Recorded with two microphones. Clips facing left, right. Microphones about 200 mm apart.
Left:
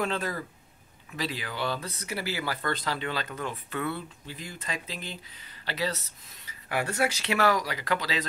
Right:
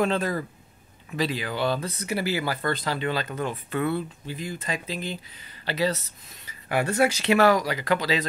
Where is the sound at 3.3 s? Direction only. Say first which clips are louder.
Right 5 dB; 35° right (ahead or behind).